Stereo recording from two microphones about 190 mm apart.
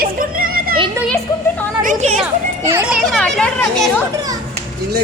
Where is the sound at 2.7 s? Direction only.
10° right (ahead or behind).